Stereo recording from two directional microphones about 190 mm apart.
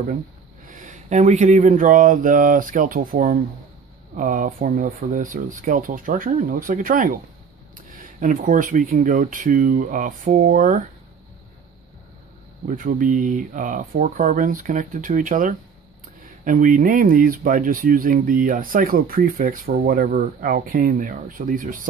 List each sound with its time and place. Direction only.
0.7 s speech: 40° right (ahead or behind)
12.6 s speech: 45° right (ahead or behind)